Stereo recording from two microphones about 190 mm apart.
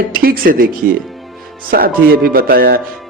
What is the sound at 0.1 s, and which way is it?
Speech, 50° right (ahead or behind).